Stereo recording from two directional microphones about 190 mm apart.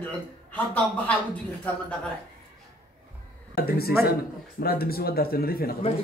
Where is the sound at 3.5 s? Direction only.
55° left (ahead or behind).